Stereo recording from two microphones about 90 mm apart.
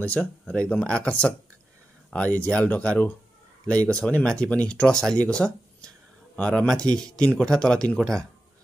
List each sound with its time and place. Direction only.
0.0 s speech: 15° left (ahead or behind)